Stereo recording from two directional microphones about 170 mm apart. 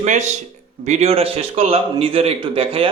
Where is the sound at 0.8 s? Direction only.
40° right (ahead or behind).